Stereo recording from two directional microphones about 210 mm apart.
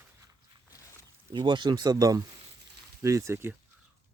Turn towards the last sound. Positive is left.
turn(degrees=-10)  # may be behind; listen again after turning